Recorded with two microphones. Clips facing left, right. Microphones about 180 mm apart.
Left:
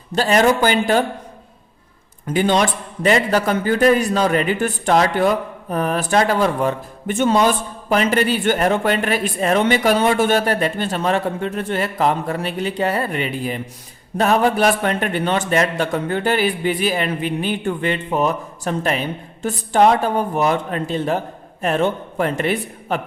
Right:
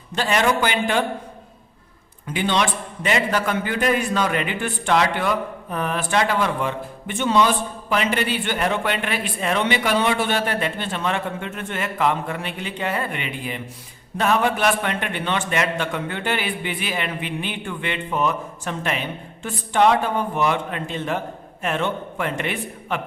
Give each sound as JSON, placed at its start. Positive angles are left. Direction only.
{"t": 0.1, "sound": "a man's voice", "side_deg": 40}
{"t": 2.2, "sound": "a man's voice", "side_deg": 40}